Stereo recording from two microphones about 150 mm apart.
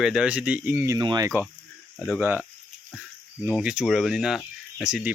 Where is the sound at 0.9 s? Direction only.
25° right (ahead or behind).